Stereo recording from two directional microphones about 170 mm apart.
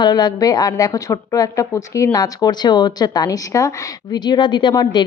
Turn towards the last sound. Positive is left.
turn(degrees=25)  # may be behind; listen again after turning